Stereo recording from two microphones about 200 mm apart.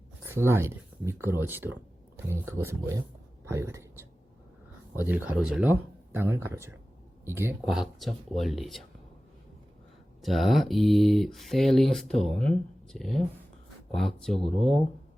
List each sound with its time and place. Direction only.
0.3 s speech: 10° right (ahead or behind)
4.9 s speech: 10° right (ahead or behind)
7.7 s speech: centre (ahead or behind)
10.2 s speech: centre (ahead or behind)